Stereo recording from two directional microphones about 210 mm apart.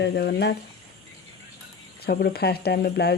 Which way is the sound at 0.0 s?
50° left (ahead or behind).